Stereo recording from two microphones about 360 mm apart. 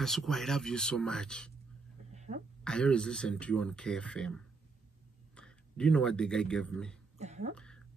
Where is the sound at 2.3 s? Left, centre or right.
Centre.